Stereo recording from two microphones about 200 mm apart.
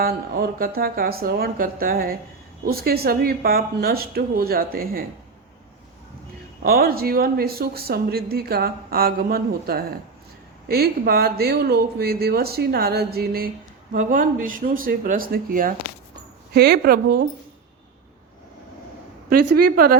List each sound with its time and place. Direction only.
0.0 s speech: 45° right (ahead or behind)
6.6 s speech: 50° right (ahead or behind)
19.3 s speech: 50° right (ahead or behind)